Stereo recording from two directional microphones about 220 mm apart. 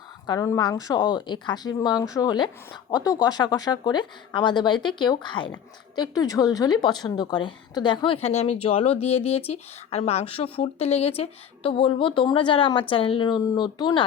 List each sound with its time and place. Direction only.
0.3 s a woman's voice: 15° left (ahead or behind)